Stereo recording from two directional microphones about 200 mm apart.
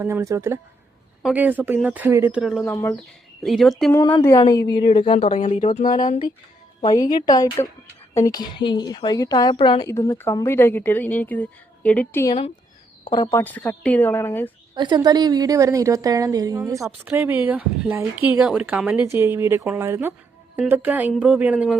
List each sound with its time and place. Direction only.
0.0 s a woman's voice: 15° right (ahead or behind)
2.6 s a woman's voice: 15° left (ahead or behind)
3.4 s speech: centre (ahead or behind)
3.9 s a woman's voice: 15° left (ahead or behind); by 6.1 s 40° left (ahead or behind)
6.8 s a woman's voice: 20° left (ahead or behind)
13.1 s a woman's voice: 20° left (ahead or behind)
13.4 s a woman's voice: 10° left (ahead or behind)
14.8 s a woman's voice: 20° right (ahead or behind); by 21.8 s 5° right (ahead or behind)